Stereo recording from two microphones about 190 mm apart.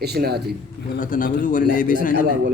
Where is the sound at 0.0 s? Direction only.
55° right (ahead or behind).